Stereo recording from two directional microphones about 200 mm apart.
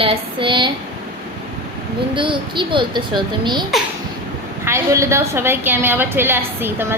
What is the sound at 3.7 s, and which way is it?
Speech, centre (ahead or behind).